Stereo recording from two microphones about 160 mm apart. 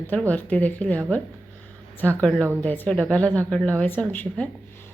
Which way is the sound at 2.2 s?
5° left (ahead or behind).